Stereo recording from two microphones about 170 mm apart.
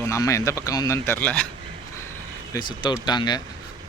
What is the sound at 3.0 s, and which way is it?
Speech, 25° left (ahead or behind).